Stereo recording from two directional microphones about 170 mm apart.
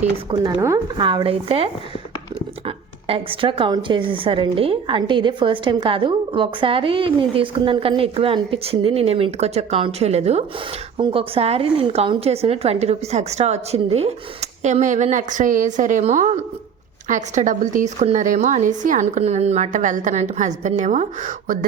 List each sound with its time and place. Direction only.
0.3 s speech: 20° right (ahead or behind)
1.0 s a woman's voice: 30° right (ahead or behind); by 21.6 s 50° right (ahead or behind)